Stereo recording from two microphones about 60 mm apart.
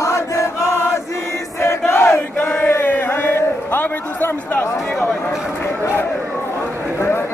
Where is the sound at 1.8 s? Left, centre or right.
Left.